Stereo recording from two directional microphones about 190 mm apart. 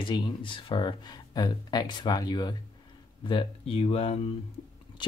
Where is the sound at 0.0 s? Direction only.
25° left (ahead or behind).